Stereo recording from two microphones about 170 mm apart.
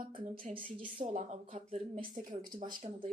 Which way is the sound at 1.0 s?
45° right (ahead or behind).